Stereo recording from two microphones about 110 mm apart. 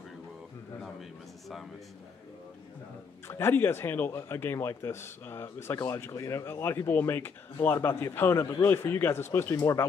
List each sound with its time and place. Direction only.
3.3 s speech: 20° left (ahead or behind)